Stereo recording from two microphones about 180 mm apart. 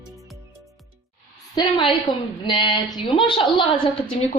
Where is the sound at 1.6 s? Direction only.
30° left (ahead or behind).